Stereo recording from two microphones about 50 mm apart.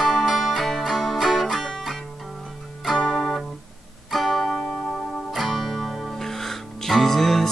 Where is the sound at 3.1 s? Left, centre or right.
Centre.